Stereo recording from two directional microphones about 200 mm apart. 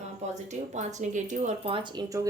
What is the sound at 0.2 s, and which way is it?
A woman's voice, 35° right (ahead or behind).